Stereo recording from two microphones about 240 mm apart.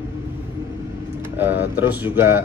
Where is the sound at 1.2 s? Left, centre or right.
Centre.